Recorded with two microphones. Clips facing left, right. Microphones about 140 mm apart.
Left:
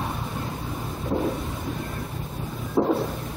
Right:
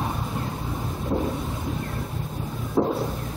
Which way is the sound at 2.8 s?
Centre (ahead or behind).